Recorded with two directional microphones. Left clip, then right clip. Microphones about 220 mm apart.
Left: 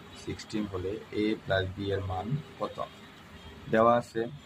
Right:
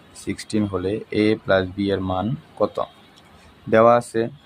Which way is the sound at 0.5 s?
50° right (ahead or behind).